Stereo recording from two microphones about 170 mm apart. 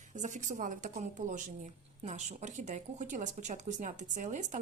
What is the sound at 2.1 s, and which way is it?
A woman's voice, 45° right (ahead or behind).